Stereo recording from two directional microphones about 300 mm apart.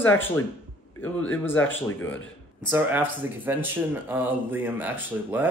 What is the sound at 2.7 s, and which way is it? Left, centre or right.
Speech, centre.